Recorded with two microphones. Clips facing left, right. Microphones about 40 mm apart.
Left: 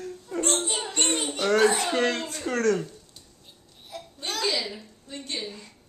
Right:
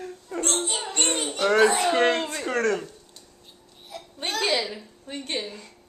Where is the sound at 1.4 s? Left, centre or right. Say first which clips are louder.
Right 2 dB; centre.